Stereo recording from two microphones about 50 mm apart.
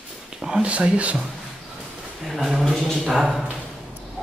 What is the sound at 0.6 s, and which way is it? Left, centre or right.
Speech, right.